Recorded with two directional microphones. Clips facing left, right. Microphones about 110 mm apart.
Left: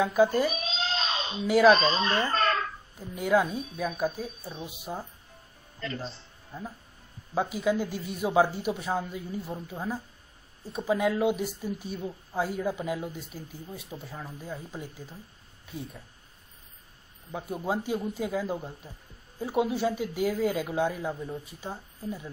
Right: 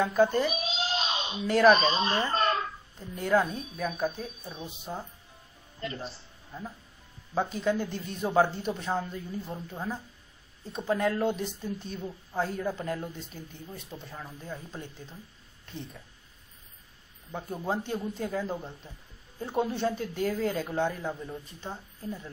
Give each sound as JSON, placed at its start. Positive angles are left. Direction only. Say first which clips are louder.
{"t": 0.0, "sound": "a woman's voice", "louder": "left 1 dB", "side_deg": 5}
{"t": 0.5, "sound": "a sound", "louder": "even", "side_deg": 30}
{"t": 1.8, "sound": "speech", "louder": "even", "side_deg": 30}
{"t": 2.0, "sound": "speech", "louder": "left 1 dB", "side_deg": -25}
{"t": 3.0, "sound": "a woman's voice", "louder": "left 1 dB", "side_deg": 5}
{"t": 6.5, "sound": "speech", "louder": "left 1 dB", "side_deg": 10}
{"t": 17.3, "sound": "speech", "louder": "left 1 dB", "side_deg": 10}